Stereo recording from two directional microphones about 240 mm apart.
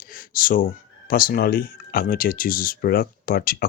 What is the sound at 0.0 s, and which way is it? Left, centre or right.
Speech, left.